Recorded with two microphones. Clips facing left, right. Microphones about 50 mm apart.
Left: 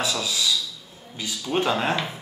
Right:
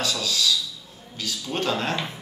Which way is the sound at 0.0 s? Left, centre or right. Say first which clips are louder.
Even; centre.